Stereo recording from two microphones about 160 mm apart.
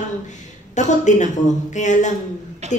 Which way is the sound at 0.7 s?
50° left (ahead or behind).